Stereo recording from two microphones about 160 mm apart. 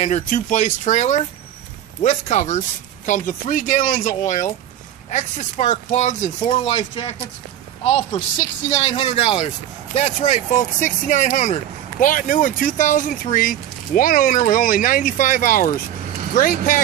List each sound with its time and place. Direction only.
0.0 s speech: 50° left (ahead or behind)
7.8 s speech: 45° left (ahead or behind)
8.8 s speech: 35° left (ahead or behind); by 16.8 s 60° left (ahead or behind)